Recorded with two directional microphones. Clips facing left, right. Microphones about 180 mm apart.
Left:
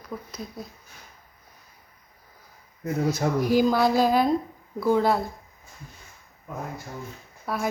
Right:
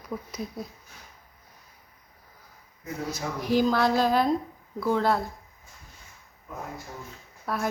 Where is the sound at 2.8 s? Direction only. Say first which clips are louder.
Left 8 dB; 50° left (ahead or behind).